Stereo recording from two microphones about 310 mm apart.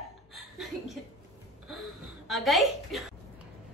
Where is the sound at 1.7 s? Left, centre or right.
Centre.